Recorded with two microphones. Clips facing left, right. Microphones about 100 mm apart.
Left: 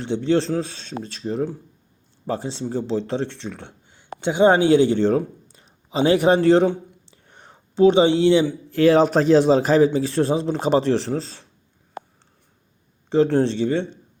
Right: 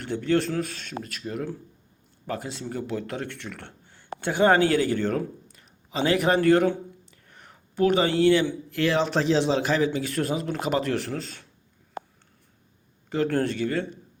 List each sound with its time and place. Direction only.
0.0 s speech: 25° left (ahead or behind)
7.1 s a sound: 30° left (ahead or behind)
8.7 s a man's voice: 40° left (ahead or behind)
13.1 s speech: 25° left (ahead or behind)